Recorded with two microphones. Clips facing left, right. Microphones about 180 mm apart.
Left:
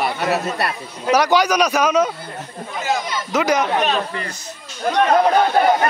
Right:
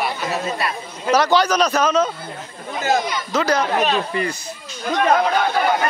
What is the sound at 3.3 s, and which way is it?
Speech, 15° left (ahead or behind).